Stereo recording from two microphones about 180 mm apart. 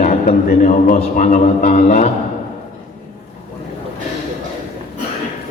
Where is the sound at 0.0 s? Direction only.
45° left (ahead or behind).